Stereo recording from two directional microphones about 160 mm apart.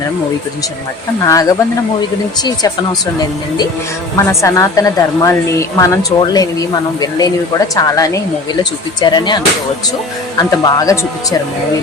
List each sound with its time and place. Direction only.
1.2 s a woman's voice: 20° left (ahead or behind)
4.3 s a woman's voice: 20° left (ahead or behind)